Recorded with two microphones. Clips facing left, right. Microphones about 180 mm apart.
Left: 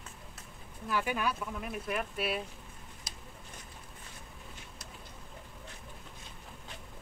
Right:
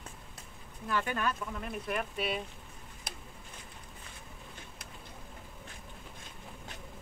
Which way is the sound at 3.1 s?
60° right (ahead or behind).